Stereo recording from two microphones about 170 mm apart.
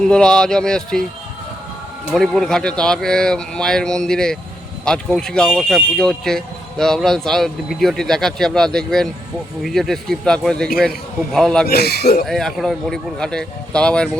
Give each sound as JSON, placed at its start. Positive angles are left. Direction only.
{"t": 0.0, "sound": "speech", "side_deg": 5}
{"t": 2.1, "sound": "speech", "side_deg": 0}
{"t": 11.6, "sound": "speech", "side_deg": 70}
{"t": 12.2, "sound": "speech", "side_deg": 0}